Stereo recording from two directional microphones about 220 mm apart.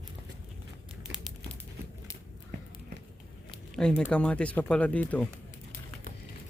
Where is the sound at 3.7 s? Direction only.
5° left (ahead or behind).